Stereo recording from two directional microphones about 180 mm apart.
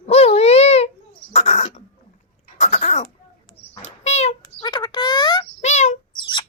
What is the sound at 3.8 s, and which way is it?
Bird, 40° left (ahead or behind).